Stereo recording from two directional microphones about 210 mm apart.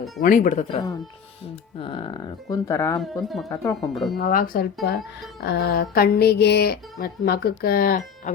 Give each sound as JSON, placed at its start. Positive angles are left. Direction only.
{"t": 0.2, "sound": "speech", "side_deg": 35}
{"t": 1.8, "sound": "speech", "side_deg": 25}
{"t": 3.0, "sound": "speech", "side_deg": 0}
{"t": 3.5, "sound": "speech", "side_deg": 15}
{"t": 3.8, "sound": "speech", "side_deg": 0}
{"t": 4.2, "sound": "speech", "side_deg": 40}